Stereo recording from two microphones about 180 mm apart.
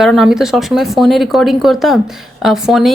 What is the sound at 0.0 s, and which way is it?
A woman's voice, centre (ahead or behind).